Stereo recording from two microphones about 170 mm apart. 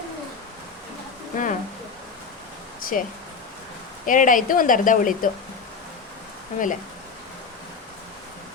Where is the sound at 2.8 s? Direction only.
55° left (ahead or behind).